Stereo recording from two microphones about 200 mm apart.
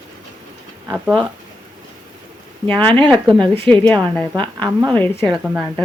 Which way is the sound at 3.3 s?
25° right (ahead or behind).